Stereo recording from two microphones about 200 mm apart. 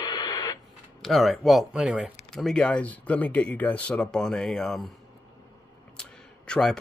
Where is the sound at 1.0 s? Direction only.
Centre (ahead or behind).